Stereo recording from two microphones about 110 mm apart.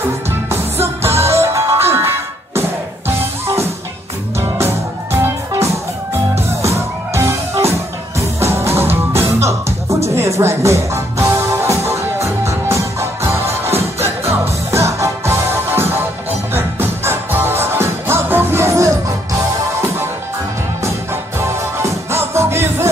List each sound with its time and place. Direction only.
0.3 s music: 20° right (ahead or behind)
4.4 s music: 20° right (ahead or behind)
6.6 s music: 25° right (ahead or behind)
20.8 s music: 25° right (ahead or behind)